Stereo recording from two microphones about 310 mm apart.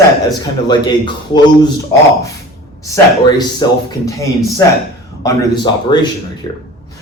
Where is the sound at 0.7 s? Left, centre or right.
Centre.